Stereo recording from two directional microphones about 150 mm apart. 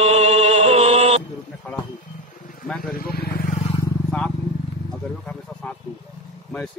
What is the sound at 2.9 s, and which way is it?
Speech, 85° left.